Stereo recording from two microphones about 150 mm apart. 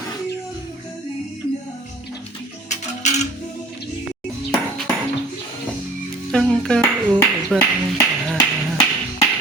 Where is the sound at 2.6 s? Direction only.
50° left (ahead or behind).